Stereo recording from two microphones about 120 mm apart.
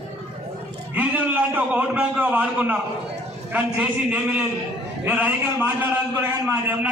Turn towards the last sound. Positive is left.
turn(degrees=-15)  # may be behind; listen again after turning